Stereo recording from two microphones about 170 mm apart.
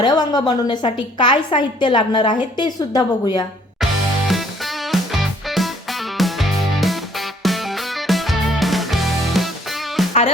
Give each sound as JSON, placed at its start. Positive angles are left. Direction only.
{"t": 0.0, "sound": "a woman's voice", "side_deg": 25}
{"t": 4.3, "sound": "music", "side_deg": 0}